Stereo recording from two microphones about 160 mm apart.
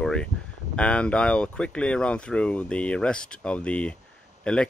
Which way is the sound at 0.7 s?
5° left (ahead or behind).